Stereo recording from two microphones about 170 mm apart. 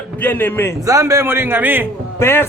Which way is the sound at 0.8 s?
20° right (ahead or behind).